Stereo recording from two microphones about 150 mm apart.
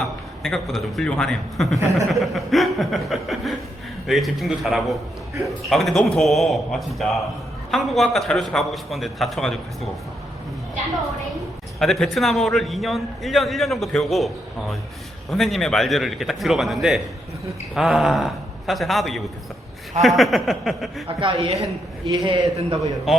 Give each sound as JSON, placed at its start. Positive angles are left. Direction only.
{"t": 0.4, "sound": "a man's voice", "side_deg": 0}
{"t": 11.8, "sound": "a man's voice", "side_deg": 0}
{"t": 15.3, "sound": "a man's voice", "side_deg": 0}
{"t": 21.2, "sound": "a woman's voice", "side_deg": -35}
{"t": 21.6, "sound": "a man's voice", "side_deg": -25}